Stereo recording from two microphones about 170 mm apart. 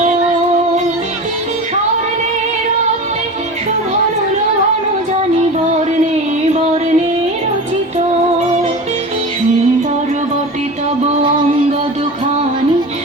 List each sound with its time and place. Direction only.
6.4 s music: 40° right (ahead or behind)
11.0 s music: 30° right (ahead or behind)